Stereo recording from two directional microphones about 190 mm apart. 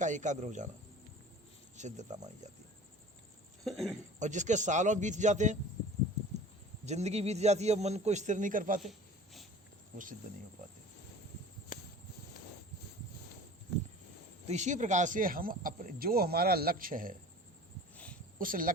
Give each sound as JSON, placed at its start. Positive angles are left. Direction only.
{"t": 0.0, "sound": "a man's voice", "side_deg": -40}
{"t": 1.7, "sound": "a man's voice", "side_deg": -40}
{"t": 3.6, "sound": "speech", "side_deg": 0}
{"t": 4.2, "sound": "a man's voice", "side_deg": -40}
{"t": 6.8, "sound": "a man's voice", "side_deg": -35}
{"t": 8.8, "sound": "a sound", "side_deg": 0}
{"t": 14.4, "sound": "speech", "side_deg": -35}
{"t": 17.9, "sound": "a sound", "side_deg": 5}
{"t": 18.3, "sound": "speech", "side_deg": -45}